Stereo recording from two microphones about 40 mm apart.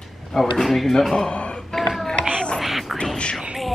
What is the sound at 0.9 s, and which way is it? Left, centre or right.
Speech, centre.